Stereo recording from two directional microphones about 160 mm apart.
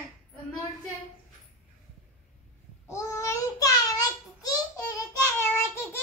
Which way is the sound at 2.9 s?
20° left (ahead or behind).